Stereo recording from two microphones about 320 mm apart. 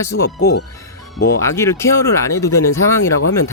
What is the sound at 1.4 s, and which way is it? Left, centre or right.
Speech, centre.